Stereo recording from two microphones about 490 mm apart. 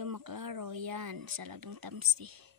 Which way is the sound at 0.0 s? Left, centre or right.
Right.